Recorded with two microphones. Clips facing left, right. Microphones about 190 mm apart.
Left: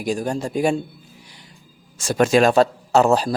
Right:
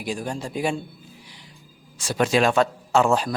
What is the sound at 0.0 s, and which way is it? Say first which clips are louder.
Speech: left 6 dB; 45° left (ahead or behind).